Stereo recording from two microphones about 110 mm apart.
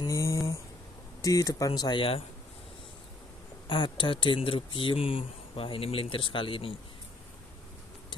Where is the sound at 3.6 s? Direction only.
45° left (ahead or behind).